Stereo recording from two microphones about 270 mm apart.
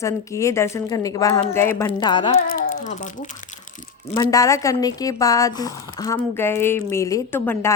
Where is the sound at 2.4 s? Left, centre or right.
Left.